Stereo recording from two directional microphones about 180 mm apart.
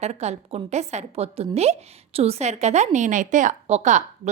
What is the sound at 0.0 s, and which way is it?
A woman's voice, 35° right (ahead or behind).